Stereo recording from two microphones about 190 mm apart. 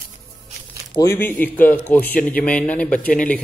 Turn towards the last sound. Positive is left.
turn(degrees=5)  # may be behind; listen again after turning